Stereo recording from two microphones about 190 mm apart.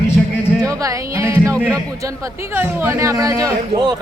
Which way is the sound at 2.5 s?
10° right (ahead or behind).